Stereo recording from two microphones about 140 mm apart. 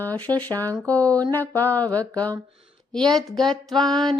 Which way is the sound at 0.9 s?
10° left (ahead or behind).